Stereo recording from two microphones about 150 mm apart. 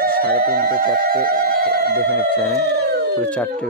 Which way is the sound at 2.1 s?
10° left (ahead or behind).